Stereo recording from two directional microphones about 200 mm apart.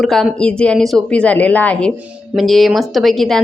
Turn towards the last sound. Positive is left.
turn(degrees=0)  # may be behind; listen again after turning